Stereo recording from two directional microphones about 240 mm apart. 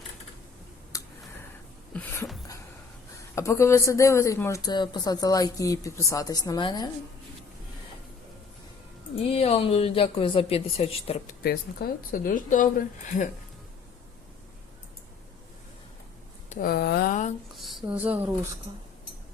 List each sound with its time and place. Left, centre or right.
0.9 s a sound: centre
3.3 s speech: centre
9.3 s speech: left
11.4 s a woman's voice: left
16.5 s a woman's voice: left
17.6 s speech: centre